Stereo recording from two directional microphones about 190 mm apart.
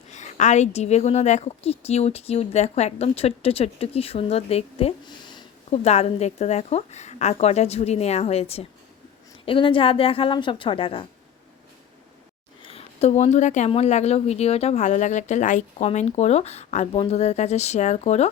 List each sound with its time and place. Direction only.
0.1 s a woman's voice: 40° left (ahead or behind)
12.6 s a woman's voice: 30° left (ahead or behind)